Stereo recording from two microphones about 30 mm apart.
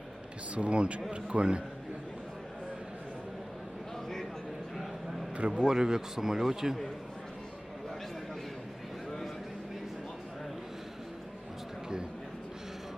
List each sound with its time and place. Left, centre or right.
0.5 s a man's voice: right
5.5 s a man's voice: right